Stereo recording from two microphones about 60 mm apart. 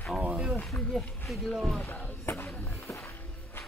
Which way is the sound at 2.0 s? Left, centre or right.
Left.